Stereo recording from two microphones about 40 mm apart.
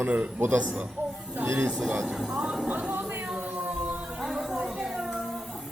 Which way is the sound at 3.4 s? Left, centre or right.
Right.